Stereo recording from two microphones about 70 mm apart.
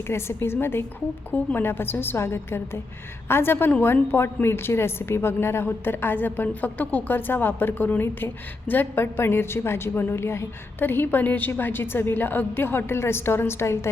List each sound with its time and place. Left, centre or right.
0.1 s a woman's voice: left